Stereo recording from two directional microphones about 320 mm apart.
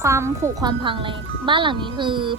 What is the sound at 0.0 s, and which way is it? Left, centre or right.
Speech, centre.